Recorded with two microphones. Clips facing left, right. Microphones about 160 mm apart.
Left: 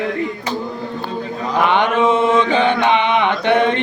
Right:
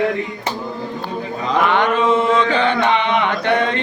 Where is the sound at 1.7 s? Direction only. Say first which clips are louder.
Left 2 dB; 20° left (ahead or behind).